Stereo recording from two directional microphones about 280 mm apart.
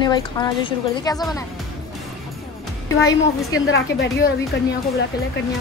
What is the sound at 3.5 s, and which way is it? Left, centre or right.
Speech, left.